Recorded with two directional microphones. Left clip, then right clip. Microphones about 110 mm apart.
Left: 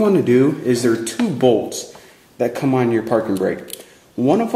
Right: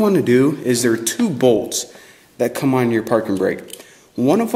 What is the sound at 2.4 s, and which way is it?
Speech, 50° right (ahead or behind).